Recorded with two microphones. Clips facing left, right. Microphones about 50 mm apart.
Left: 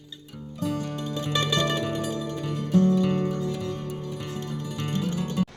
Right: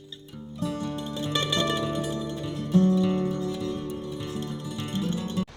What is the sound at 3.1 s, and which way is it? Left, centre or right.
Music, left.